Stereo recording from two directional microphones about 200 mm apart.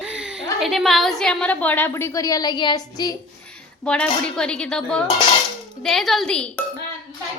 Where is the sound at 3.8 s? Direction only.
5° left (ahead or behind).